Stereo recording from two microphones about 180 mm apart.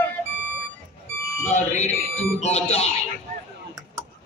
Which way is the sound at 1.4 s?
40° left (ahead or behind).